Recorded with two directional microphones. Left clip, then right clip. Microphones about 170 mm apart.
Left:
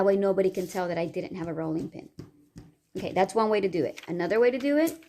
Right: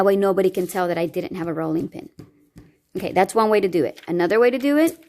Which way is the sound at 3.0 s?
60° right (ahead or behind).